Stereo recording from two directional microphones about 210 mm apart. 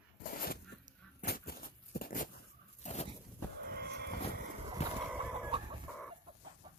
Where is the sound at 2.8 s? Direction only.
30° left (ahead or behind).